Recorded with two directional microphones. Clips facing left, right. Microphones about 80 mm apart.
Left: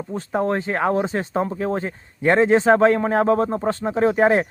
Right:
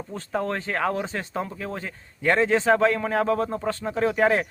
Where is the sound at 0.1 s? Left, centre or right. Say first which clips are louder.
Left 6 dB; left.